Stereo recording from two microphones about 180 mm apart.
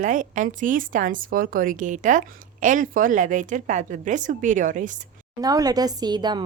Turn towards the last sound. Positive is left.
turn(degrees=-25)  # may be behind; listen again after turning